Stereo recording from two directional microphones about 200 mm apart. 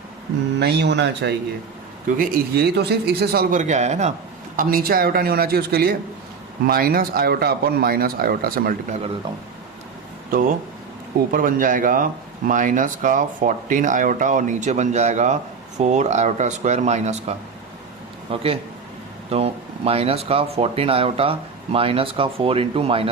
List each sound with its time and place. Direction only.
0.6 s speech: 55° right (ahead or behind); by 4.1 s 35° right (ahead or behind)
4.5 s speech: 45° right (ahead or behind)
11.3 s speech: 45° right (ahead or behind); by 23.0 s 30° right (ahead or behind)